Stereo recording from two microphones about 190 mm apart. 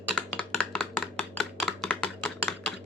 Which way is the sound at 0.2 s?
5° left (ahead or behind).